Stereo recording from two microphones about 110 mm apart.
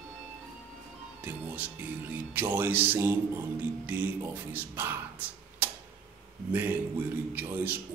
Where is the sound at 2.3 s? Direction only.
15° right (ahead or behind).